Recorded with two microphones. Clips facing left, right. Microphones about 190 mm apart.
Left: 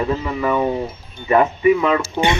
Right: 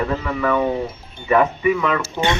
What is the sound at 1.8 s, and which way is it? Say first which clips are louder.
Speech: left 3 dB; 15° left (ahead or behind).